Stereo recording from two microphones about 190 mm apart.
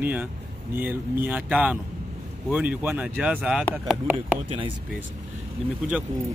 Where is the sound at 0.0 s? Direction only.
10° right (ahead or behind).